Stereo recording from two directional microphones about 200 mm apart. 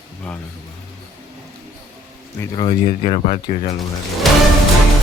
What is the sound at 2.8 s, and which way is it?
Speech, 30° left (ahead or behind).